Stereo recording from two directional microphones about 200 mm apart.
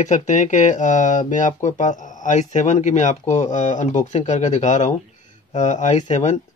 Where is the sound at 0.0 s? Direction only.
40° left (ahead or behind).